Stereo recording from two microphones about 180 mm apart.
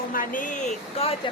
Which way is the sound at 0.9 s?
35° left (ahead or behind).